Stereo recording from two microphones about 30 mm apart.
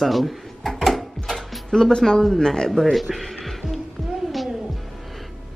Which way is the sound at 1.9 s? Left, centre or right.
Left.